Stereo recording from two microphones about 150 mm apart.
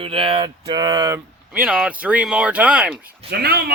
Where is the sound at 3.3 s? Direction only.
90° right.